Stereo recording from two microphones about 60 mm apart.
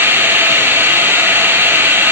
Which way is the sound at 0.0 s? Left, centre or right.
Right.